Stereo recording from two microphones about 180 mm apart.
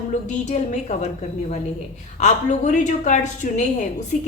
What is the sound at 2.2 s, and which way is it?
A woman's voice, 40° left (ahead or behind).